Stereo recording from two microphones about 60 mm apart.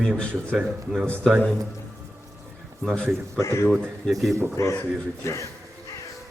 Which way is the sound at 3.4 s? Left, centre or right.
Left.